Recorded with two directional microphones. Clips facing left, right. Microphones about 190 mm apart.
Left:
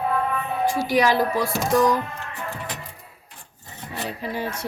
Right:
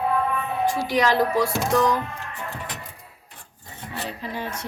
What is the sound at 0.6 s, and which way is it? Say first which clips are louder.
Speech: left 2 dB; 10° left (ahead or behind).